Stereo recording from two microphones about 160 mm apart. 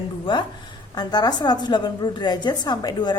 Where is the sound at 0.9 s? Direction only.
25° left (ahead or behind).